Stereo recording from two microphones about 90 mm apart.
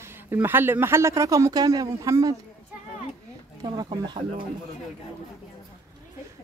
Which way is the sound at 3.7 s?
55° right (ahead or behind).